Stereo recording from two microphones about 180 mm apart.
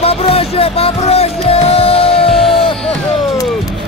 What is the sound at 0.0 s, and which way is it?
Music, 35° left (ahead or behind).